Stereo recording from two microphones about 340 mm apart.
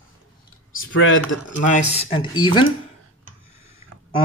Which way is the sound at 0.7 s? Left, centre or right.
Left.